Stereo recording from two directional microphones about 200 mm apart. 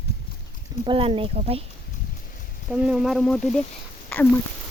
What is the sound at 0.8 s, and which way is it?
Speech, 25° right (ahead or behind).